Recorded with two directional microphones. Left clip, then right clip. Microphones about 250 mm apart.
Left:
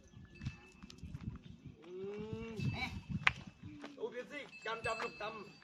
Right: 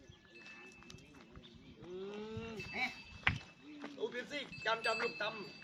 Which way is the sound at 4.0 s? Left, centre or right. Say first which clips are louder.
Right 3 dB; right.